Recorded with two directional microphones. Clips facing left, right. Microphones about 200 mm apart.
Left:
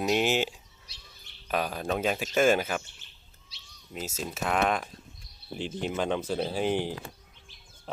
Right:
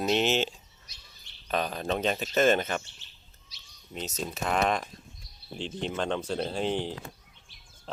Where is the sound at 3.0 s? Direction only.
55° left (ahead or behind).